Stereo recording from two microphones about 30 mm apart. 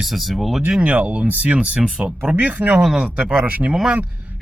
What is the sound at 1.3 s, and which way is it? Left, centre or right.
Speech, right.